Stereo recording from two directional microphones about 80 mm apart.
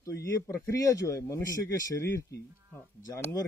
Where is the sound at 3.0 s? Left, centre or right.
Left.